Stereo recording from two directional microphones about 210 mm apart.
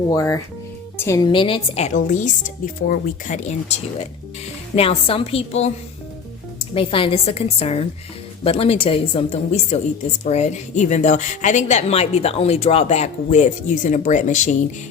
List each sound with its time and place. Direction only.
0.1 s a woman's voice: 15° left (ahead or behind); by 14.5 s 35° left (ahead or behind)